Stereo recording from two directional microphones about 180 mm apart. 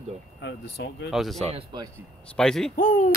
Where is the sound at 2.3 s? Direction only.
5° left (ahead or behind).